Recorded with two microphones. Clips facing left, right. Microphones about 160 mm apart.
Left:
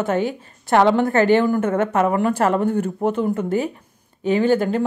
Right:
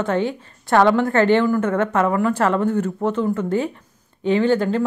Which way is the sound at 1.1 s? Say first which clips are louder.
Even; 10° left (ahead or behind).